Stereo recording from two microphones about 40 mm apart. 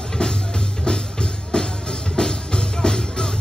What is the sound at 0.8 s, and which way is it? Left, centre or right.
Music, left.